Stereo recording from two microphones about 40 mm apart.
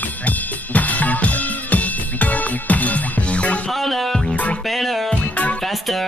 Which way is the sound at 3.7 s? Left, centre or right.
Centre.